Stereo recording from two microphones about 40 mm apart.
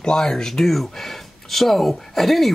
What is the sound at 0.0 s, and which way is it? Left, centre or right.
Speech, centre.